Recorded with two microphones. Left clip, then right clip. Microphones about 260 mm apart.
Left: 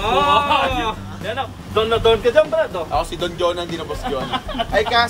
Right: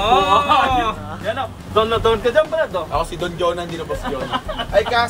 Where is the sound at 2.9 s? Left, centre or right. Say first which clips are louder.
Left 1 dB; centre.